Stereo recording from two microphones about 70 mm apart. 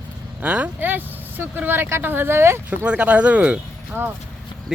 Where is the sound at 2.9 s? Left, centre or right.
Centre.